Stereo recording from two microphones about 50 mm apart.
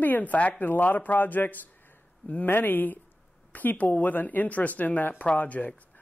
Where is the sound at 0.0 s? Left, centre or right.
Left.